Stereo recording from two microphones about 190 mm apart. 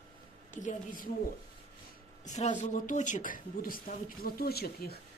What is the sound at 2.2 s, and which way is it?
Speech, 40° left (ahead or behind).